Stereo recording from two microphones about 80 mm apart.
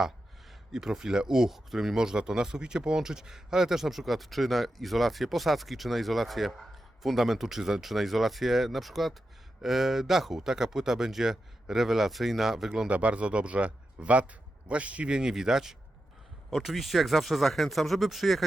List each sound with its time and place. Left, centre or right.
0.7 s speech: centre
12.9 s speech: centre